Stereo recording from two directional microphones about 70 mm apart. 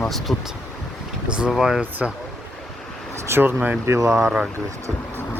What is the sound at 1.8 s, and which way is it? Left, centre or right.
Speech, right.